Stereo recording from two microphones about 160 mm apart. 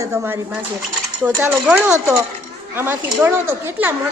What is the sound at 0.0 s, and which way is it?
A woman's voice, 20° right (ahead or behind).